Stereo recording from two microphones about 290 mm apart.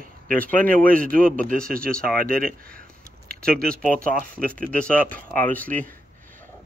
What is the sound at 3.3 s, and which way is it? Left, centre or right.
Speech, centre.